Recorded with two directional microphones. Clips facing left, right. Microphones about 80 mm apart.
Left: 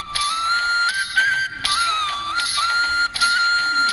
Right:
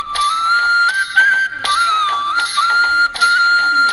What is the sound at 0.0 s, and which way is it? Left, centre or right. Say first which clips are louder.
Music: right 7 dB; right.